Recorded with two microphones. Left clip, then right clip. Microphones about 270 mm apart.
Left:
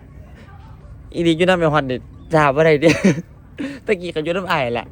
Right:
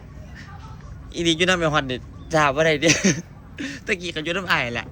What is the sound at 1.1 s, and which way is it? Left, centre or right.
Speech, centre.